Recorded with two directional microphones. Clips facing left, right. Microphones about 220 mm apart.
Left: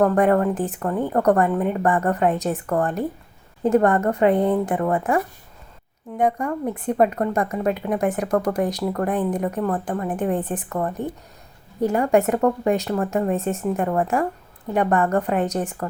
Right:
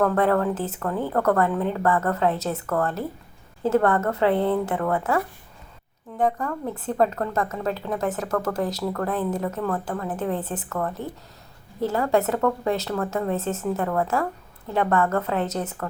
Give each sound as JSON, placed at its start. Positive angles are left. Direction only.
{"t": 0.0, "sound": "speech", "side_deg": 15}
{"t": 1.5, "sound": "a woman's voice", "side_deg": 5}
{"t": 1.8, "sound": "speech", "side_deg": 15}